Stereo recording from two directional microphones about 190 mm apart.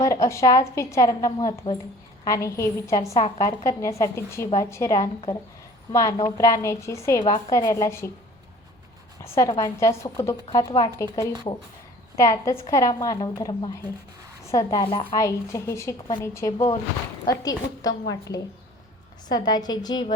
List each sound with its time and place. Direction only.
0.0 s a woman's voice: 15° left (ahead or behind)
9.2 s a woman's voice: 15° left (ahead or behind)
19.3 s a woman's voice: 20° left (ahead or behind)